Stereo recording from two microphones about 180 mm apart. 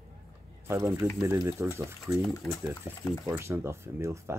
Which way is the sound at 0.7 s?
20° right (ahead or behind).